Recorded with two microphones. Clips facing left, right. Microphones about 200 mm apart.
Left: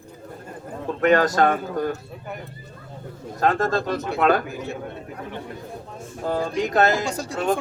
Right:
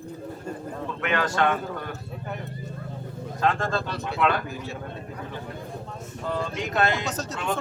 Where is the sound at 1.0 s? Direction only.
40° left (ahead or behind).